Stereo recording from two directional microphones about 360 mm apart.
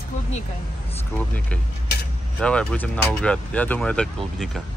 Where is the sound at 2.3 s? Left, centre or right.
Centre.